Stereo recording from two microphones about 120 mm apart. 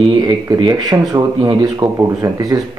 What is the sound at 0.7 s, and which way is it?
Speech, 30° right (ahead or behind).